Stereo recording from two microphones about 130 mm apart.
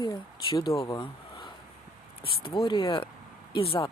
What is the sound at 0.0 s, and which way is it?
Speech, 30° left (ahead or behind).